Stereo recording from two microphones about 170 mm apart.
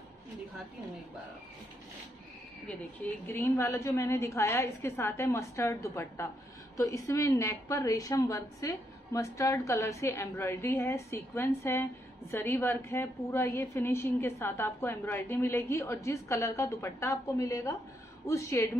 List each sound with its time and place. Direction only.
2.7 s a woman's voice: 10° left (ahead or behind)